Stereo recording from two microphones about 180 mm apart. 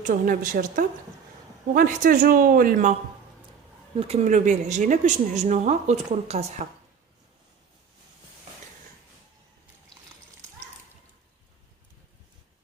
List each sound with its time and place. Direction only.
0.0 s speech: 50° right (ahead or behind)
3.9 s a woman's voice: 35° right (ahead or behind)